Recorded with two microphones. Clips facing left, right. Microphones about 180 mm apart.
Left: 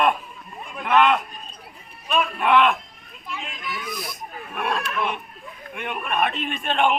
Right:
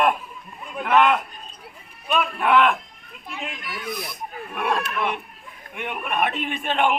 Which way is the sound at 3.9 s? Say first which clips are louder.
Right 6 dB; 55° right (ahead or behind).